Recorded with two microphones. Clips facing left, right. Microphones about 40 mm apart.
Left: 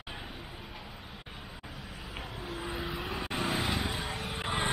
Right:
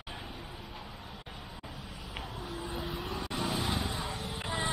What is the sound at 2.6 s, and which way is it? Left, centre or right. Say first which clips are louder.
Vehicle: left 2 dB; centre.